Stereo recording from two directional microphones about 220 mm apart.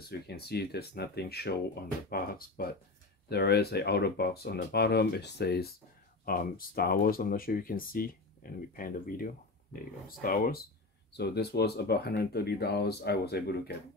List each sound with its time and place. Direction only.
0.3 s speech: 45° left (ahead or behind)